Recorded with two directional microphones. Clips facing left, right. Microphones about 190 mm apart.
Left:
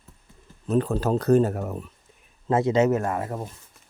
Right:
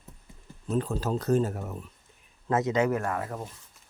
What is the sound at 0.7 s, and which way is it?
Speech, 65° left (ahead or behind).